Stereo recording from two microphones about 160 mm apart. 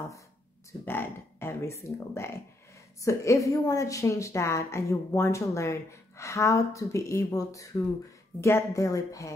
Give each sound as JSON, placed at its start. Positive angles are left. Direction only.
{"t": 0.8, "sound": "a woman's voice", "side_deg": 15}